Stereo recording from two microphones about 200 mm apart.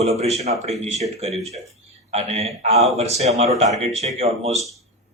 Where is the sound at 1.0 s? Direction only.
30° right (ahead or behind).